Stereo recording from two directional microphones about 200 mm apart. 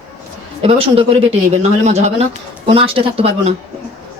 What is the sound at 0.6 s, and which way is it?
Speech, 30° right (ahead or behind).